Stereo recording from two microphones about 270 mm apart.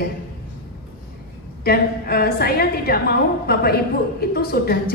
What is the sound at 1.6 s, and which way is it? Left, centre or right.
A woman's voice, left.